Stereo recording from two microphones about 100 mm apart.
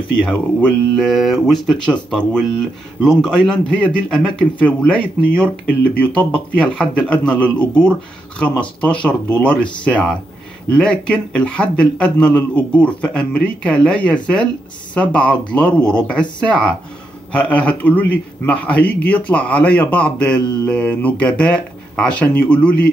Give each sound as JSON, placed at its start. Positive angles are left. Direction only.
{"t": 0.2, "sound": "speech", "side_deg": 10}
{"t": 0.9, "sound": "a man's voice", "side_deg": 0}